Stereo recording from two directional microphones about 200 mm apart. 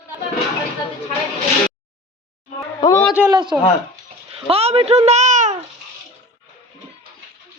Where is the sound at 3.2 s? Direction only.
10° right (ahead or behind).